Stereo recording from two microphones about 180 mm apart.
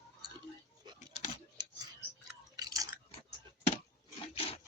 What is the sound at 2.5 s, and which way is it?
Biting, 20° right (ahead or behind).